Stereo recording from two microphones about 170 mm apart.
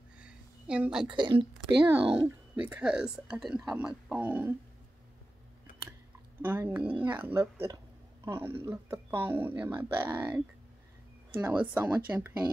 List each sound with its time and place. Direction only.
0.2 s a sound: 5° right (ahead or behind)
1.1 s speech: 30° right (ahead or behind)
2.2 s speech: 10° right (ahead or behind)
6.4 s speech: 10° right (ahead or behind)
11.4 s speech: 10° right (ahead or behind)